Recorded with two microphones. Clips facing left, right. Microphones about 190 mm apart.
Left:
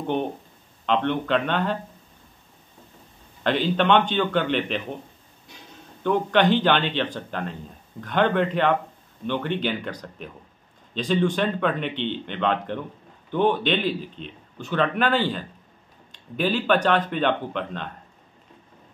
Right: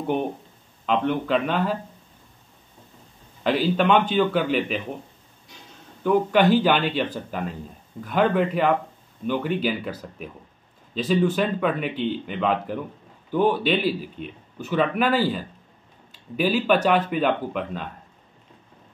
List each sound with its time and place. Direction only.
0.0 s a man's voice: 10° right (ahead or behind)
3.4 s speech: 5° right (ahead or behind)
6.0 s a man's voice: 5° right (ahead or behind)